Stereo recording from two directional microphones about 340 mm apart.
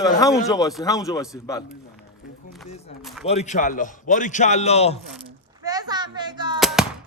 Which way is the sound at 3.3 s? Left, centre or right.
Centre.